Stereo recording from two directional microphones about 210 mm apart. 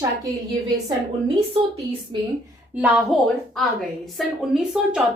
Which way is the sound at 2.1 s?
25° right (ahead or behind).